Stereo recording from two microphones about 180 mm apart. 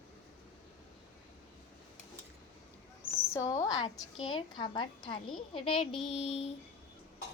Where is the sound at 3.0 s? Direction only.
15° left (ahead or behind).